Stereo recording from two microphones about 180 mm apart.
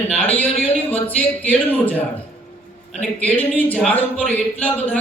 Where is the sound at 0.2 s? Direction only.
10° left (ahead or behind).